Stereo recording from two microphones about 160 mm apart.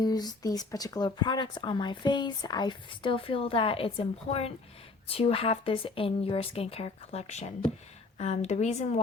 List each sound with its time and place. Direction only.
0.0 s a woman's voice: 25° left (ahead or behind); by 9.0 s 45° left (ahead or behind)